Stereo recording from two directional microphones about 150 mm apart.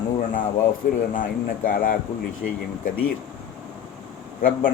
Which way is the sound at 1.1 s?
65° left (ahead or behind).